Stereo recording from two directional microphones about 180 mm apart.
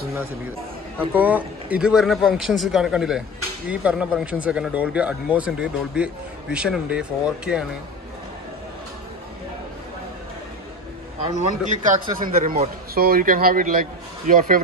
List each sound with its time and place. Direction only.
0.9 s a man's voice: 10° right (ahead or behind)
11.2 s a man's voice: 40° right (ahead or behind)